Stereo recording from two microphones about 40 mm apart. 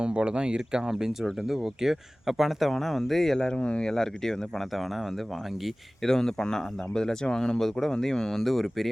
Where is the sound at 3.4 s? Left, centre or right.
Left.